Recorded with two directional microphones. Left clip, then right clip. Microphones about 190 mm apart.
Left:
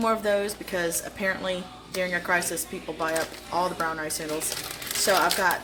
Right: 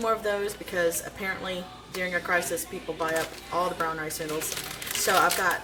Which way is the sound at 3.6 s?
30° left (ahead or behind).